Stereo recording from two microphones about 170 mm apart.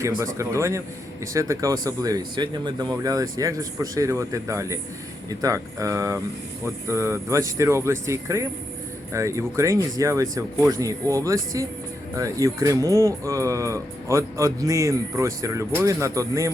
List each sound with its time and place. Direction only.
0.3 s speech: 15° right (ahead or behind)